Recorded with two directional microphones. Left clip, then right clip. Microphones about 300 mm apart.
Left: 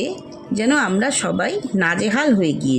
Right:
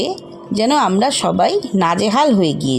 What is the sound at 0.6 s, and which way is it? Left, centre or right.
Speech, right.